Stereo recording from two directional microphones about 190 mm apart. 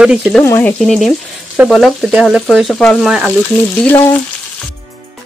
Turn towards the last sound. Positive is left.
turn(degrees=10)  # may be behind; listen again after turning